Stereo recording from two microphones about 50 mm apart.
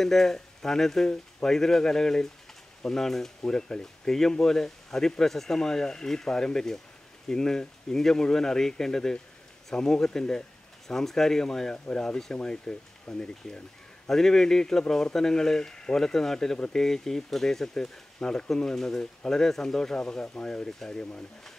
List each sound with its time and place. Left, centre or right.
0.0 s speech: centre